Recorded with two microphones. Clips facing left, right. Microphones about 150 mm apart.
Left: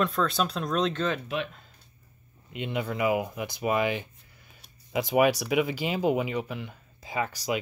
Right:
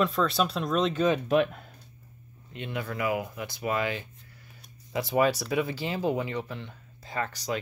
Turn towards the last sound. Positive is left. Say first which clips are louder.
# left 2 dB
turn(degrees=10)  # may be behind; listen again after turning